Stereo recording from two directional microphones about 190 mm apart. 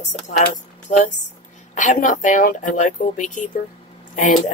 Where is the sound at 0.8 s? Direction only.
40° left (ahead or behind).